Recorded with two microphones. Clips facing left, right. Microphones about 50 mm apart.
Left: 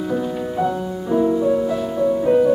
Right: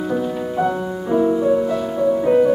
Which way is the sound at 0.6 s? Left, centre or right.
Centre.